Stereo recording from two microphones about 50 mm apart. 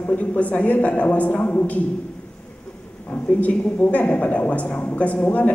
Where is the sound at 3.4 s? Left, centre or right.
Left.